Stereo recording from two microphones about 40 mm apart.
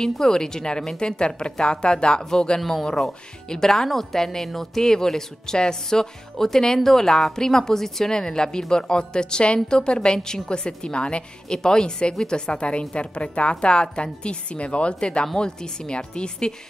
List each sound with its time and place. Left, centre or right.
0.0 s a woman's voice: centre
2.6 s a woman's voice: centre